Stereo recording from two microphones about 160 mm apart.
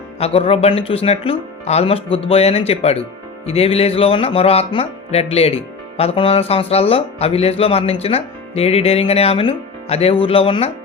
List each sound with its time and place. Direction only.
0.2 s music: 35° left (ahead or behind)